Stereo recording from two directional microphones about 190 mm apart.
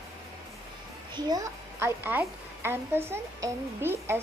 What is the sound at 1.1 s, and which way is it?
A woman's voice, 20° right (ahead or behind).